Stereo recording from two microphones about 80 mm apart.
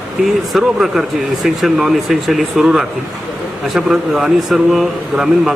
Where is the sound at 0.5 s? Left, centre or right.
Centre.